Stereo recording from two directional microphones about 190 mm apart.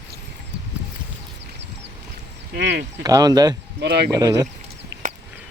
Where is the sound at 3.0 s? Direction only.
20° right (ahead or behind).